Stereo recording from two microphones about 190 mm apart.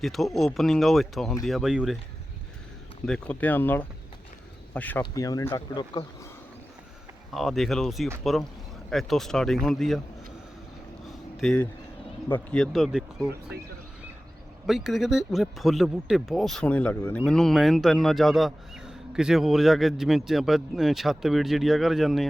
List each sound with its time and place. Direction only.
0.0 s speech: centre (ahead or behind)
3.1 s speech: 10° left (ahead or behind)
7.3 s speech: centre (ahead or behind)
11.3 s speech: 5° left (ahead or behind)
14.7 s speech: centre (ahead or behind)